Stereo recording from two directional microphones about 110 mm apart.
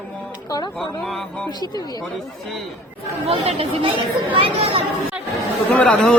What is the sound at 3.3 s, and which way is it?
Speech, 60° right (ahead or behind).